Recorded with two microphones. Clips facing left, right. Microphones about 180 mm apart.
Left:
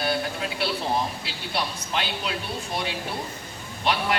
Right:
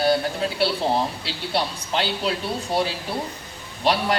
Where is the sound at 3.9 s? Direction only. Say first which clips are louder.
Right 4 dB; 35° right (ahead or behind).